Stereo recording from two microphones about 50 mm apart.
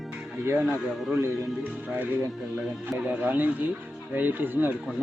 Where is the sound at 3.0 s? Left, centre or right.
Right.